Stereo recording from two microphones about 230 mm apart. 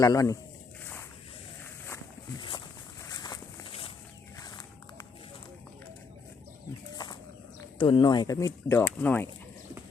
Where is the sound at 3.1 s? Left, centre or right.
Centre.